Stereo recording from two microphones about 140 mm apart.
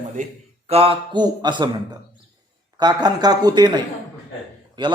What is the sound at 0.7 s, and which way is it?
A man's voice, 40° right (ahead or behind).